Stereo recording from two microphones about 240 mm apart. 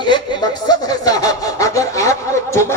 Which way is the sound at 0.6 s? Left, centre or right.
Centre.